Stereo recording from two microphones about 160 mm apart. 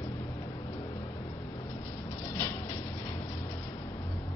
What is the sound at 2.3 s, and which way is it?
Vehicle, 15° left (ahead or behind).